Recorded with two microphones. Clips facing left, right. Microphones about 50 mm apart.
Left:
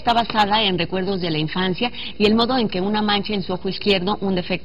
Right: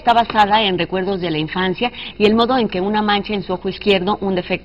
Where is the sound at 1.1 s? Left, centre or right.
Centre.